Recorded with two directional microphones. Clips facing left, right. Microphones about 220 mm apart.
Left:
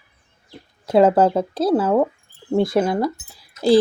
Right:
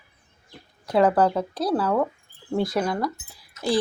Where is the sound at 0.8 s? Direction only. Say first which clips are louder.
Left 5 dB; 25° left (ahead or behind).